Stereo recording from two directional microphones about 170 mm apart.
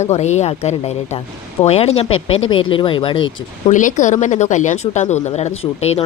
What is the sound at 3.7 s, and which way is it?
Speech, 45° left (ahead or behind).